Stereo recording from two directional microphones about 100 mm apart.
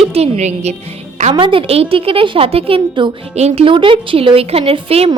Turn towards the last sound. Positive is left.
turn(degrees=-80)